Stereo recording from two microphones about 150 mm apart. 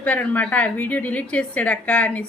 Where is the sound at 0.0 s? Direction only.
10° left (ahead or behind).